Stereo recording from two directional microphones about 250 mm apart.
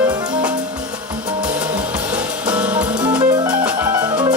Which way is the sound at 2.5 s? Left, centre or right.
Centre.